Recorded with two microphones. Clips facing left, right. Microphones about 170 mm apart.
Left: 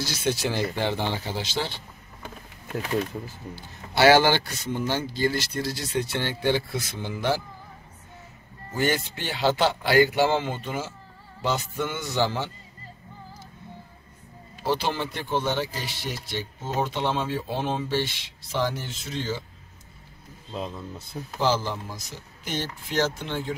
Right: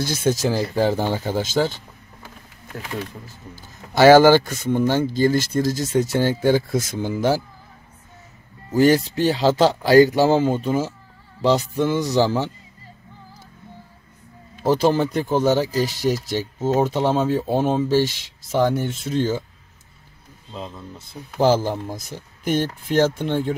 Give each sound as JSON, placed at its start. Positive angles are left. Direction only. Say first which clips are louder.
{"t": 0.0, "sound": "a man's voice", "louder": "right 6 dB", "side_deg": -50}
{"t": 3.5, "sound": "a man's voice", "louder": "right 6 dB", "side_deg": -45}
{"t": 8.7, "sound": "speech", "louder": "right 10 dB", "side_deg": -35}
{"t": 14.6, "sound": "speech", "louder": "right 9 dB", "side_deg": -45}
{"t": 21.4, "sound": "a man's voice", "louder": "right 7 dB", "side_deg": -50}